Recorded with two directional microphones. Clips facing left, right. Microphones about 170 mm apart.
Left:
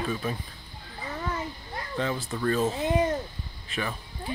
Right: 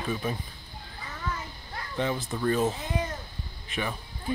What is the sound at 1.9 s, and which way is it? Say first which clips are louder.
Speech: right 1 dB; 15° right (ahead or behind).